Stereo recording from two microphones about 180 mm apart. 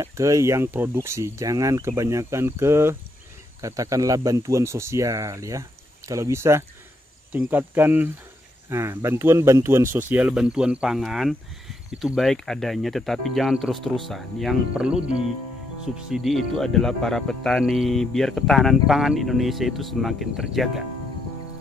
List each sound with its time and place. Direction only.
0.0 s speech: 15° right (ahead or behind); by 20.8 s centre (ahead or behind)